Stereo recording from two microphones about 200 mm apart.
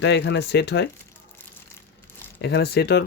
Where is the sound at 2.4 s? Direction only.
55° left (ahead or behind).